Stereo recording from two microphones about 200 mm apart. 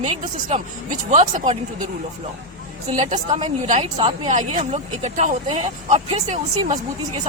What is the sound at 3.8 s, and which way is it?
Speech, 25° right (ahead or behind).